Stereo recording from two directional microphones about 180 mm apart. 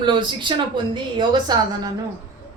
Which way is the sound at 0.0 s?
25° right (ahead or behind).